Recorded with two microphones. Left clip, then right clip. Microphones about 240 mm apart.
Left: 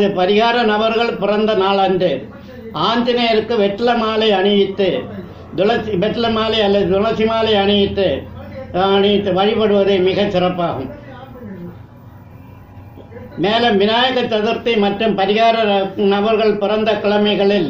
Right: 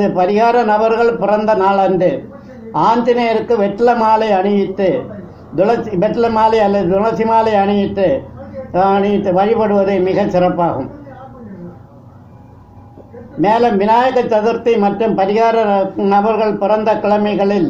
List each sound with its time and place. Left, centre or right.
0.0 s a man's voice: right
13.4 s a man's voice: right